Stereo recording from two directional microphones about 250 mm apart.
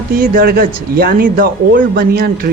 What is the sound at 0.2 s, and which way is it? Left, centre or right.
Speech, right.